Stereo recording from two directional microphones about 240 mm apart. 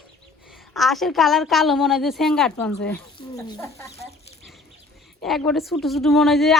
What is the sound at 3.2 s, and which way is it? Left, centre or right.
Speech, centre.